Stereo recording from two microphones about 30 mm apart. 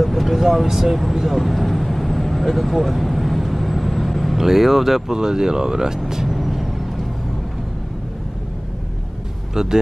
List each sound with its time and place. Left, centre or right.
0.0 s vehicle: centre
4.4 s speech: centre
5.1 s speech: right
6.2 s vehicle: centre
9.5 s speech: centre